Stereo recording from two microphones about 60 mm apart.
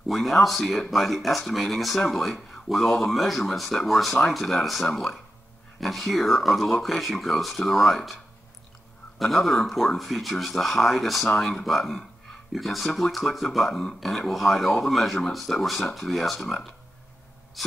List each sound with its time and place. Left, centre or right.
0.1 s speech: centre
9.2 s speech: centre
17.6 s gasp: centre